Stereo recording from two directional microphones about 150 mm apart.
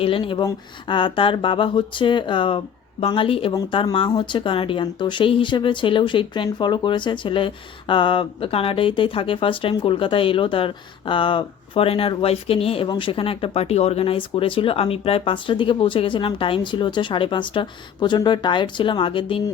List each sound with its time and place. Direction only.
0.0 s speech: 35° left (ahead or behind)